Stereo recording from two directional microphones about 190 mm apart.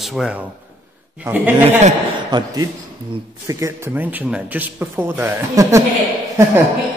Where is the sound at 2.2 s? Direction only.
20° right (ahead or behind).